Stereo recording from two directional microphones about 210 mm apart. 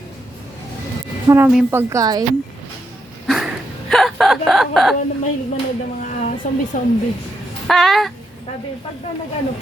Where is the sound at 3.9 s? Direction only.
Centre (ahead or behind).